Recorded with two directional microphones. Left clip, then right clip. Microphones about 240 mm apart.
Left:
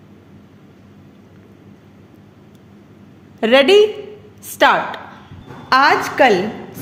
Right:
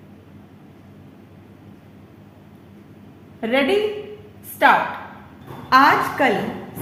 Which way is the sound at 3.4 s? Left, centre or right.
Left.